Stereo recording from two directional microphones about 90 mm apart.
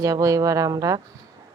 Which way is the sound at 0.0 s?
40° right (ahead or behind).